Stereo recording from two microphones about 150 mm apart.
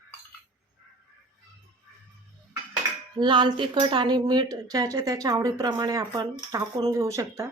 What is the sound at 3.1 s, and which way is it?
Speech, 30° right (ahead or behind).